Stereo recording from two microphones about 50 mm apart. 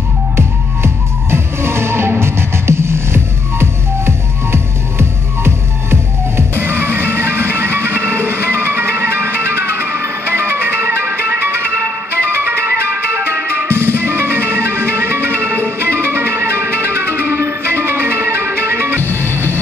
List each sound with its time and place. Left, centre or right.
0.4 s music: right